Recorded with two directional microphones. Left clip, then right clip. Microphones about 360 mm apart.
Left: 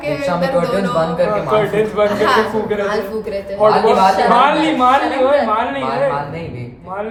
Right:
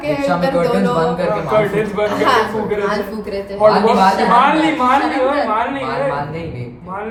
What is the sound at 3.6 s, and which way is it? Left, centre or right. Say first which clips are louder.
Speech: even; left.